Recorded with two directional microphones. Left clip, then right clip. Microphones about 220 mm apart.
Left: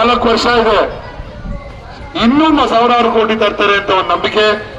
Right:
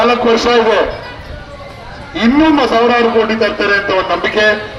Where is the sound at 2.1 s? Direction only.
25° left (ahead or behind).